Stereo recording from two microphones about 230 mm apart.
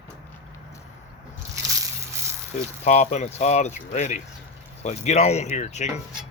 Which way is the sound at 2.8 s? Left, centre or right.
Left.